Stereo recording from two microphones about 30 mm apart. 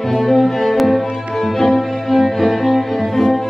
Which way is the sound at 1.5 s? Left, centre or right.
Centre.